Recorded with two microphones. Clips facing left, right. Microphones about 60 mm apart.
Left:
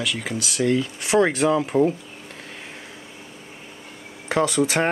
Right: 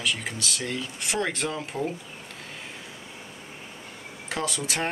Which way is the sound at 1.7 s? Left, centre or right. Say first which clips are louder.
Left 11 dB; left.